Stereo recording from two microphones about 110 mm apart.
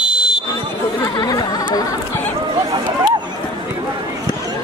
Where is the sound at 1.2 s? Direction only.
35° left (ahead or behind).